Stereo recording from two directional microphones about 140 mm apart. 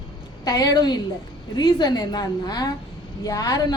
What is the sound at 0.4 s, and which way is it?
A woman's voice, 25° left (ahead or behind).